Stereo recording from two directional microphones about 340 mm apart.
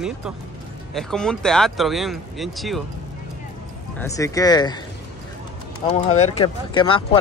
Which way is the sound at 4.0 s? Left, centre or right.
Centre.